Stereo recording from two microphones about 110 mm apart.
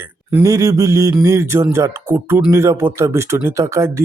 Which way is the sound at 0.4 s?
30° right (ahead or behind).